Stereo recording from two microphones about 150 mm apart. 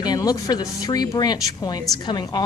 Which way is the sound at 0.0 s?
25° left (ahead or behind).